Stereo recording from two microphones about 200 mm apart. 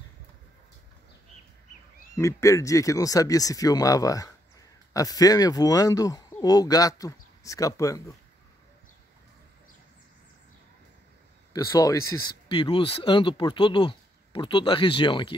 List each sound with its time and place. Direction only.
2.1 s speech: 15° left (ahead or behind)
11.5 s speech: 15° left (ahead or behind)